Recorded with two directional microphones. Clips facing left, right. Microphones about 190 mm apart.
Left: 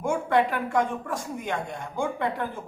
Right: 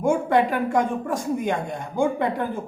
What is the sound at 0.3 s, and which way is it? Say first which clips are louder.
Speech: right 3 dB; 15° right (ahead or behind).